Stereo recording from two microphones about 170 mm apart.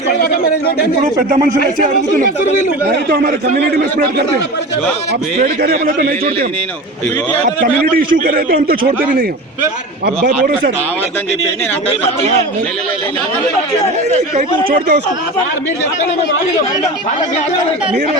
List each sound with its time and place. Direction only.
1.8 s speech: 55° right (ahead or behind)
2.8 s a man's voice: 70° right (ahead or behind)
5.4 s a man's voice: 50° right (ahead or behind)
7.4 s a man's voice: 55° right (ahead or behind)
10.2 s a man's voice: 60° right (ahead or behind)
14.7 s a man's voice: 65° right (ahead or behind)